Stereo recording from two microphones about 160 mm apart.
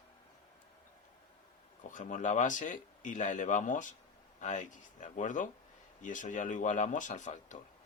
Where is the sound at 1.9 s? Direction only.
55° left (ahead or behind).